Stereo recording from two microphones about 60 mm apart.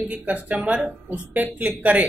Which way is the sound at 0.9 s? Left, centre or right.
Right.